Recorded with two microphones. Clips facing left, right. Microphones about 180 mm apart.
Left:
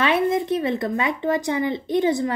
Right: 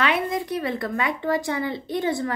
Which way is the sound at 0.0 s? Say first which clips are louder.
Left 4 dB; 25° left (ahead or behind).